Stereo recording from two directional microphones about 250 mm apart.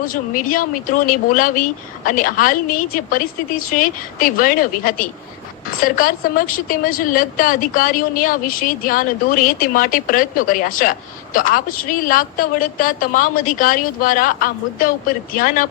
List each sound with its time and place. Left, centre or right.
0.0 s a woman's voice: left